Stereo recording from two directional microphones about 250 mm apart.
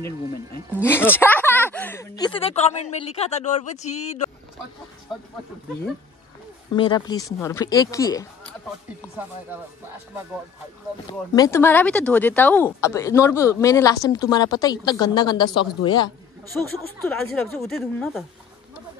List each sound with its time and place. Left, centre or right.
0.7 s speech: centre; by 4.3 s left
6.7 s speech: centre
11.3 s speech: centre
16.7 s speech: centre